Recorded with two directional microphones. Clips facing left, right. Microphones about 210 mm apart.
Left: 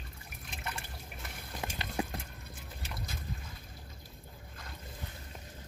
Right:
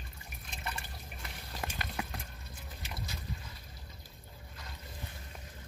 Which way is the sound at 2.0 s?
30° left (ahead or behind).